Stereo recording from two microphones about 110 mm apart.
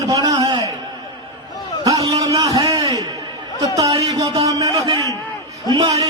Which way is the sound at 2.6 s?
35° right (ahead or behind).